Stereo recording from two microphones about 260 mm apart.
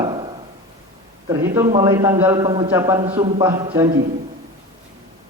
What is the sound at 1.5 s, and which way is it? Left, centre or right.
A man's voice, centre.